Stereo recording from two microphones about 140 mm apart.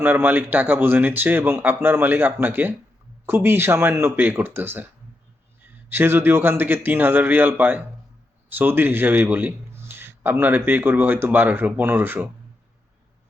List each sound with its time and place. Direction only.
0.0 s a man's voice: 15° right (ahead or behind)
5.9 s a man's voice: 15° right (ahead or behind)